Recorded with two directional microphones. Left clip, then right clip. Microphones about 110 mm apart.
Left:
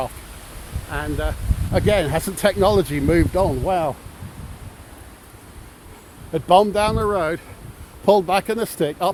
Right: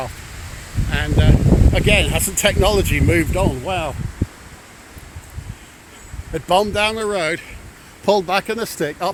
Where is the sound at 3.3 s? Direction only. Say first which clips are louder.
Left 1 dB; 45° left (ahead or behind).